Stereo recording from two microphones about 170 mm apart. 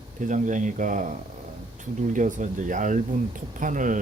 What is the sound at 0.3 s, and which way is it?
Speech, 50° right (ahead or behind).